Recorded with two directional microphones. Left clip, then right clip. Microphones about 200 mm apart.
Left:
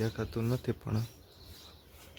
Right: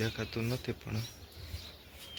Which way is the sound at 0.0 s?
25° left (ahead or behind).